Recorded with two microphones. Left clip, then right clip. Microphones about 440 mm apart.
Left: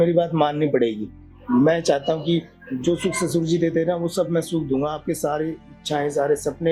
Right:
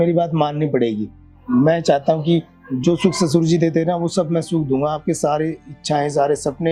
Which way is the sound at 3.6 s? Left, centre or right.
Right.